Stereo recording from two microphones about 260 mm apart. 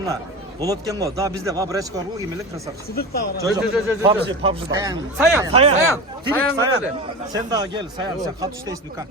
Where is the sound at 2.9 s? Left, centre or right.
Left.